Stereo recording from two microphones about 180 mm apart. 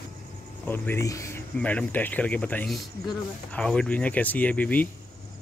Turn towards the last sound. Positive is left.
turn(degrees=10)  # may be behind; listen again after turning